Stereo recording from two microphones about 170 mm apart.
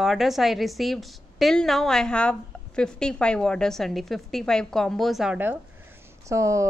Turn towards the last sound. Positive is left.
turn(degrees=-20)  # may be behind; listen again after turning